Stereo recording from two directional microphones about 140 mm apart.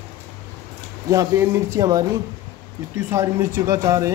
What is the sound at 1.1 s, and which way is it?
Speech, 20° right (ahead or behind).